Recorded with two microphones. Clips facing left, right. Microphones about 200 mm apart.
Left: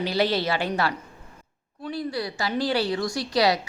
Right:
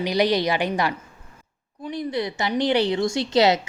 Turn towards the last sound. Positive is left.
turn(degrees=-25)  # may be behind; listen again after turning